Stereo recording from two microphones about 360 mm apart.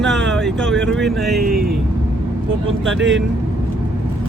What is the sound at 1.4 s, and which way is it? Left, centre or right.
Speech, right.